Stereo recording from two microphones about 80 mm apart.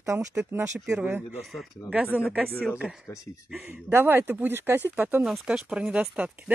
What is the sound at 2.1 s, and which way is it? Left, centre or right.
Speech, centre.